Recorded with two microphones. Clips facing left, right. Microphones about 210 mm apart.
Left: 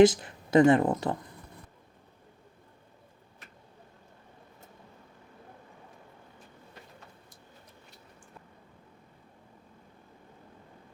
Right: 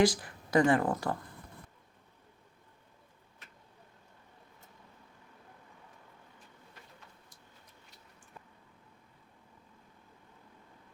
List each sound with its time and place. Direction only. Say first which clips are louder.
0.0 s speech: left 7 dB; 25° left (ahead or behind)